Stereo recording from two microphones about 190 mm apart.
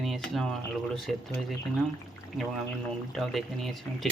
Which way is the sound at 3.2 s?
Centre (ahead or behind).